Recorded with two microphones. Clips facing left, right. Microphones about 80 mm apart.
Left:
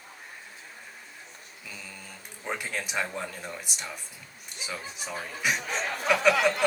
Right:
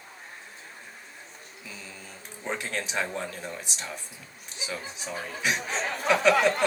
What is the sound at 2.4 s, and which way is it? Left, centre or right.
Speech, centre.